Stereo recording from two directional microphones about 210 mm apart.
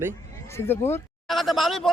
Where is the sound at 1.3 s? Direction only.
Centre (ahead or behind).